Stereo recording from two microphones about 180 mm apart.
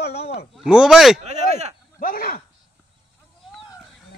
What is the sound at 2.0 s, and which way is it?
Speech, 55° left (ahead or behind).